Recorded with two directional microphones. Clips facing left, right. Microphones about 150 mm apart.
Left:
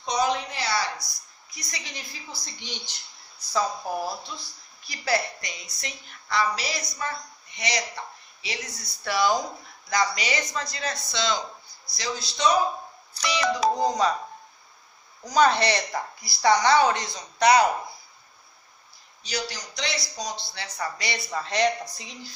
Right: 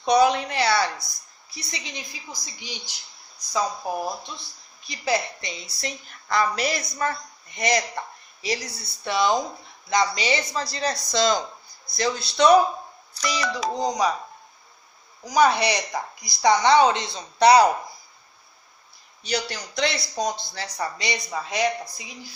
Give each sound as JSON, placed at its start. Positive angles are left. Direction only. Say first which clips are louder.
{"t": 0.0, "sound": "a man's voice", "louder": "right 7 dB", "side_deg": -65}
{"t": 1.5, "sound": "a woman's voice", "louder": "right 3 dB", "side_deg": -25}
{"t": 6.2, "sound": "a woman's voice", "louder": "right 3 dB", "side_deg": -50}
{"t": 8.4, "sound": "a woman's voice", "louder": "right 7 dB", "side_deg": -35}
{"t": 11.9, "sound": "a man's voice", "louder": "right 7 dB", "side_deg": -55}
{"t": 13.7, "sound": "a woman's voice", "louder": "even", "side_deg": -15}
{"t": 15.2, "sound": "speech", "louder": "right 1 dB", "side_deg": -10}
{"t": 19.2, "sound": "a man's voice", "louder": "right 4 dB", "side_deg": -60}
{"t": 20.7, "sound": "speech", "louder": "right 2 dB", "side_deg": -20}
{"t": 21.3, "sound": "a woman's voice", "louder": "left 2 dB", "side_deg": -10}